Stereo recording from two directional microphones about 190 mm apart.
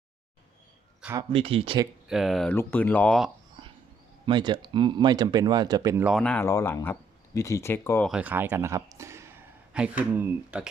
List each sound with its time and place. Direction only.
1.3 s speech: 30° right (ahead or behind)
2.0 s speech: centre (ahead or behind)
4.3 s speech: 25° right (ahead or behind)
6.1 s speech: 5° left (ahead or behind)
8.1 s a man's voice: 10° right (ahead or behind)